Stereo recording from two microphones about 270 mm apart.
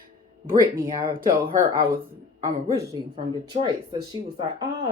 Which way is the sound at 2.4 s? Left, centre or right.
Centre.